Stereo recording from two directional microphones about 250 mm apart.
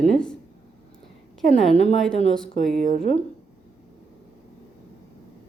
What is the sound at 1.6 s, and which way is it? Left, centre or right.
Speech, left.